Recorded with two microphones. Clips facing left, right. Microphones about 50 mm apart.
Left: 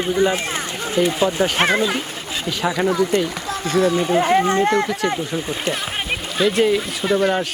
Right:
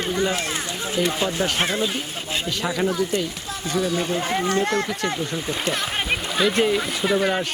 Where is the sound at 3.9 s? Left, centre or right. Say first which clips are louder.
Left 7 dB; left.